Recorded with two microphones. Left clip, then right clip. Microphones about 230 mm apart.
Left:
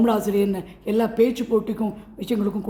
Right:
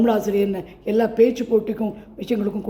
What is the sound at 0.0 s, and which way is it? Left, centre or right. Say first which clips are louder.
A woman's voice: right 1 dB; centre.